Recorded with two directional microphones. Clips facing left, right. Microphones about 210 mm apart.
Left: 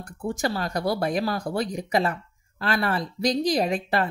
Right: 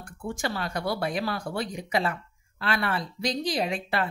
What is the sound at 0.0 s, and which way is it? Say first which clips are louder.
Speech: left 4 dB; 40° left (ahead or behind).